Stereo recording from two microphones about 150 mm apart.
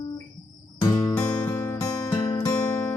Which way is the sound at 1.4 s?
20° left (ahead or behind).